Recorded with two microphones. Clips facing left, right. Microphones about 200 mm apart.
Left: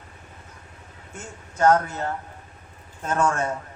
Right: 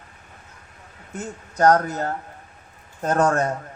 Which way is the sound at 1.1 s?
40° right (ahead or behind).